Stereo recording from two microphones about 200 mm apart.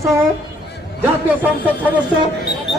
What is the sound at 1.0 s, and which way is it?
Speech, 10° right (ahead or behind).